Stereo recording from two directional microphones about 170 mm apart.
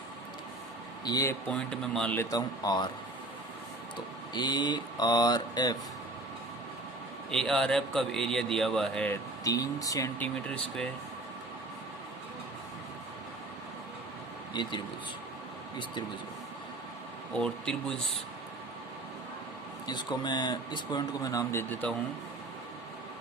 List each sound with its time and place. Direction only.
1.0 s speech: 20° left (ahead or behind)
1.5 s a man's voice: 5° left (ahead or behind)
2.3 s speech: 25° left (ahead or behind)
4.4 s speech: 25° left (ahead or behind)
7.3 s a man's voice: 5° left (ahead or behind)
9.4 s speech: 20° left (ahead or behind)
14.5 s a man's voice: 25° left (ahead or behind)
17.3 s a man's voice: 5° left (ahead or behind)
19.9 s speech: 25° left (ahead or behind); by 21.9 s 10° left (ahead or behind)